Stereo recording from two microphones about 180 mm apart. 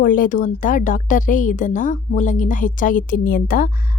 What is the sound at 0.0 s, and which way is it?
A woman's voice, 50° left (ahead or behind).